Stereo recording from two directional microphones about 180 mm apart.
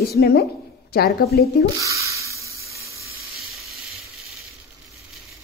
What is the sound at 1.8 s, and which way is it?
Speech, 15° right (ahead or behind).